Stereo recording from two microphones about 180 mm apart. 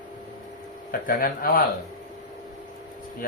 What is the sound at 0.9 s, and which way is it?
Speech, 50° left (ahead or behind).